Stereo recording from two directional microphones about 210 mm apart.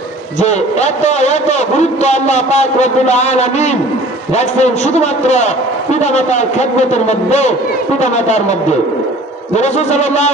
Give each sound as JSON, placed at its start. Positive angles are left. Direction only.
{"t": 0.4, "sound": "a man's voice", "side_deg": 35}